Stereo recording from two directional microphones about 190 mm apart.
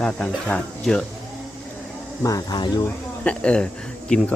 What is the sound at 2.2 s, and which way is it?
Speech, 20° left (ahead or behind).